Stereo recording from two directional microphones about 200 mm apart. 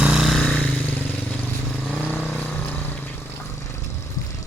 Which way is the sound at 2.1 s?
10° left (ahead or behind).